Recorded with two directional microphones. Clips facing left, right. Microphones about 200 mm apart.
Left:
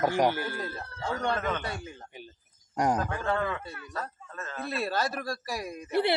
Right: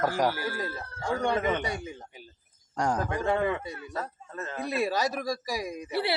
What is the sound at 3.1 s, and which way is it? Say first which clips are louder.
Speech: right 3 dB; 15° right (ahead or behind).